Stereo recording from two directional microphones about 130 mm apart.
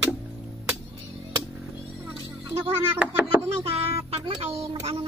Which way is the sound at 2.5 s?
15° right (ahead or behind).